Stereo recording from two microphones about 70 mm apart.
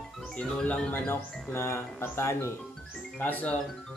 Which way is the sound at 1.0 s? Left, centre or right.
Left.